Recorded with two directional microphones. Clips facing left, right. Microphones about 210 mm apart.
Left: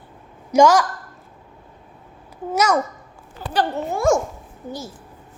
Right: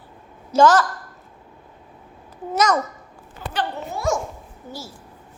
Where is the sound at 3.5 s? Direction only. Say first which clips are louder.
Left 5 dB; 45° left (ahead or behind).